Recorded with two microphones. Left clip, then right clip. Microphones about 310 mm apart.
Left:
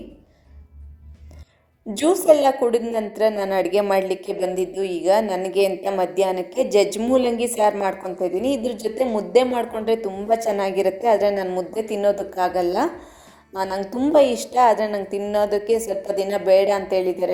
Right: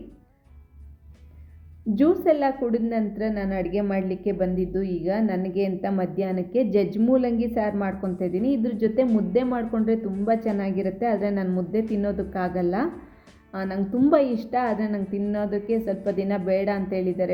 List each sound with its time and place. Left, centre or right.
2.0 s a woman's voice: centre